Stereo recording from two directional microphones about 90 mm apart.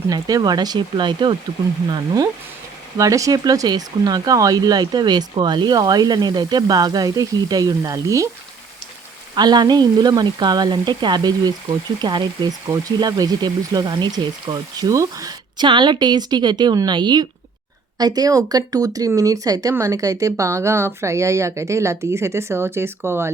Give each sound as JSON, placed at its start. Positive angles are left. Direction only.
{"t": 0.1, "sound": "speech", "side_deg": -45}
{"t": 3.0, "sound": "speech", "side_deg": -40}
{"t": 9.3, "sound": "speech", "side_deg": -50}
{"t": 12.6, "sound": "speech", "side_deg": -40}
{"t": 15.5, "sound": "speech", "side_deg": -60}
{"t": 17.9, "sound": "speech", "side_deg": -45}